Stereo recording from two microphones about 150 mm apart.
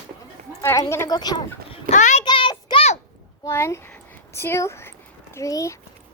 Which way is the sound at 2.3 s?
35° left (ahead or behind).